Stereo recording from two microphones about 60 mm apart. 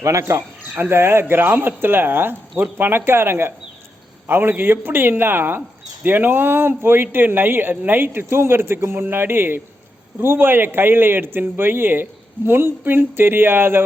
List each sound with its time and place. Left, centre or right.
0.0 s speech: right